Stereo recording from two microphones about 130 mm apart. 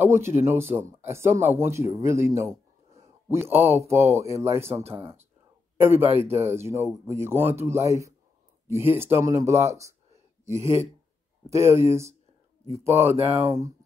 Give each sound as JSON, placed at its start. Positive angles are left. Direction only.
{"t": 0.0, "sound": "speech", "side_deg": -20}
{"t": 10.4, "sound": "speech", "side_deg": -60}
{"t": 11.5, "sound": "speech", "side_deg": -20}